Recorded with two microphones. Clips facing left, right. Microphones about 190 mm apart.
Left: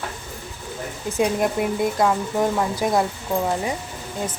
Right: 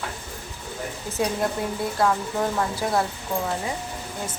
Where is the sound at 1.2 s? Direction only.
15° left (ahead or behind).